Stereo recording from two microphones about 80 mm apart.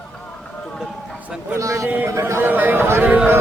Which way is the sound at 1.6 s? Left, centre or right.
Right.